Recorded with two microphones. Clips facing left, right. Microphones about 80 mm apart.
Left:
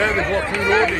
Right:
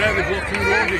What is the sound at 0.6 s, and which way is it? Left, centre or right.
Speech, centre.